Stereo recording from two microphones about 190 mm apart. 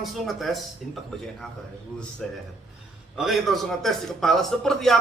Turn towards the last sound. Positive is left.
turn(degrees=0)  # may be behind; listen again after turning